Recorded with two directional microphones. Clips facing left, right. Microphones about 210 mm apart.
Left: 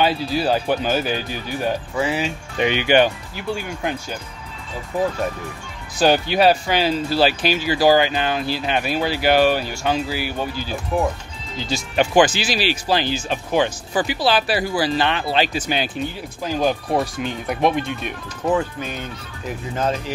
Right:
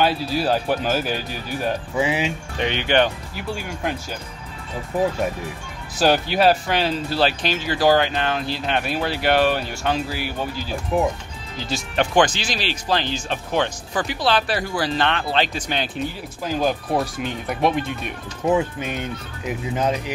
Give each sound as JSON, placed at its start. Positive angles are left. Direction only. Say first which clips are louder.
{"t": 0.0, "sound": "speech", "louder": "left 1 dB", "side_deg": 0}
{"t": 2.0, "sound": "speech", "louder": "right 2 dB", "side_deg": -15}
{"t": 2.6, "sound": "speech", "louder": "left 3 dB", "side_deg": 10}
{"t": 5.9, "sound": "speech", "louder": "left 2 dB", "side_deg": 0}
{"t": 18.6, "sound": "speech", "louder": "right 1 dB", "side_deg": -20}